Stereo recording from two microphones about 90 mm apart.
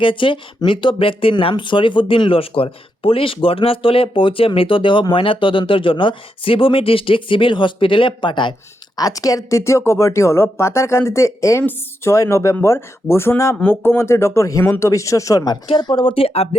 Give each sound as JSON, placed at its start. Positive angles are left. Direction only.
{"t": 0.0, "sound": "speech", "side_deg": 70}
{"t": 9.0, "sound": "speech", "side_deg": 40}
{"t": 15.8, "sound": "speech", "side_deg": 60}